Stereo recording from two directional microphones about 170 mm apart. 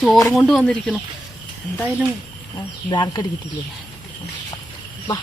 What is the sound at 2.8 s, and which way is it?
Speech, 25° left (ahead or behind).